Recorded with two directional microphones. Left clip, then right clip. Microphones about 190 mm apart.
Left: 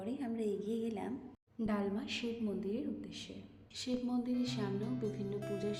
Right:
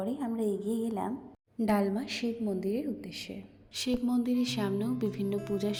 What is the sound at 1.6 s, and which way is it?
A woman's voice, 35° right (ahead or behind).